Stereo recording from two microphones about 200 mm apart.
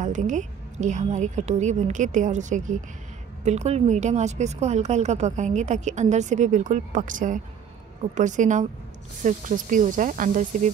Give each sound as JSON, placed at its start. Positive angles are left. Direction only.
{"t": 0.0, "sound": "speech", "side_deg": -40}